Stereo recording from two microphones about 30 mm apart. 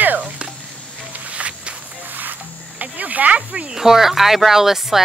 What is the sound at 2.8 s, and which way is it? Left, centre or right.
Cricket, right.